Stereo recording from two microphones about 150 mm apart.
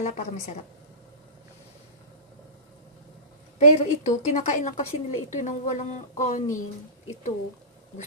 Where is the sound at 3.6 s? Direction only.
45° left (ahead or behind).